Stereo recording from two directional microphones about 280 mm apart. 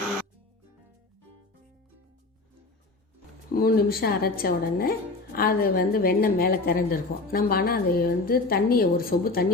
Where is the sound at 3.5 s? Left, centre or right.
Left.